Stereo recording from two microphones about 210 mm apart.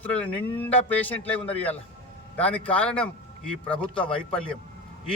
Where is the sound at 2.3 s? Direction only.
5° left (ahead or behind).